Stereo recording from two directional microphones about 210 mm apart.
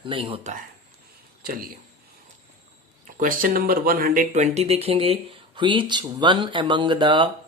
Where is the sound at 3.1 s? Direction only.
40° right (ahead or behind).